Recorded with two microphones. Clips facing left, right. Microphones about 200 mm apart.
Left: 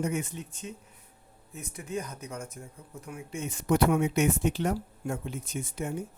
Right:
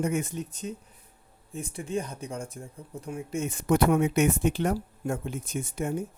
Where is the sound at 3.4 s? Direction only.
55° right (ahead or behind).